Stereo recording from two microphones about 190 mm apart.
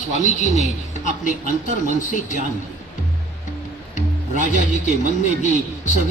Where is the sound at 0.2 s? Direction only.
40° left (ahead or behind).